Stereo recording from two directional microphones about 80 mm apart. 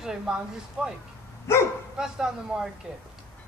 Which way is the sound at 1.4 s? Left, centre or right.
Left.